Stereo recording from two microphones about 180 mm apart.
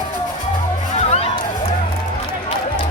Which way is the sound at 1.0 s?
35° left (ahead or behind).